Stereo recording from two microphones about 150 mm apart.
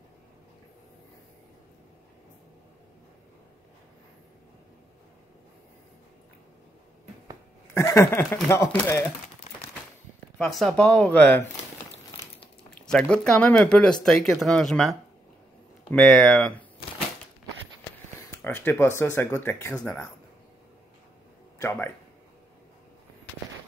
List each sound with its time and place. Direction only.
7.7 s speech: 20° left (ahead or behind)
10.3 s speech: 5° left (ahead or behind)
12.8 s speech: 5° left (ahead or behind)
18.4 s speech: 10° left (ahead or behind)
21.5 s speech: 15° left (ahead or behind)